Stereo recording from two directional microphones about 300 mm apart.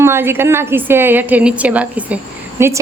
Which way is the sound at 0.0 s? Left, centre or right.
Centre.